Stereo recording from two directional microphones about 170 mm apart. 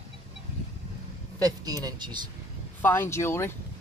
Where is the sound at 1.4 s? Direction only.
20° right (ahead or behind).